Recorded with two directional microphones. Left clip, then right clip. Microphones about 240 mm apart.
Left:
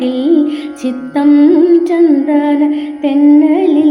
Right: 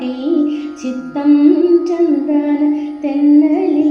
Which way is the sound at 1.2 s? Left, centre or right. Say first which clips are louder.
Left 3 dB; centre.